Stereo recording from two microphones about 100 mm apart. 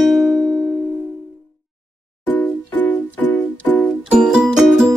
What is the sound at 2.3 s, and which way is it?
Music, 15° left (ahead or behind).